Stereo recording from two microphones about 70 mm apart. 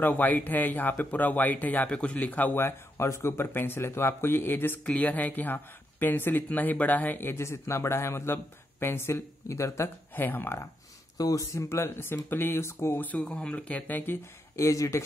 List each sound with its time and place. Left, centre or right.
0.0 s speech: left
10.1 s speech: left
11.1 s speech: left
13.3 s speech: centre
14.6 s speech: left